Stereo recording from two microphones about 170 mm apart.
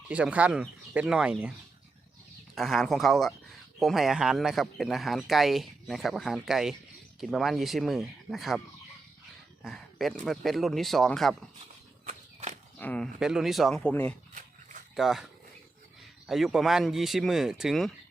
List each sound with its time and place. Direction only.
0.1 s speech: 5° right (ahead or behind)
2.6 s speech: centre (ahead or behind)
9.6 s speech: centre (ahead or behind)
12.0 s walk: 45° right (ahead or behind)
12.8 s speech: 10° left (ahead or behind)
13.1 s speech: 5° right (ahead or behind)
14.9 s speech: centre (ahead or behind)